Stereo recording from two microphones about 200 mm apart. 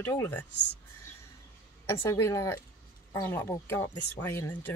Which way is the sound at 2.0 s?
15° left (ahead or behind).